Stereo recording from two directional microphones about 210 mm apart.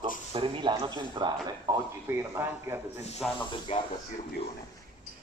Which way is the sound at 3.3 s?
25° left (ahead or behind).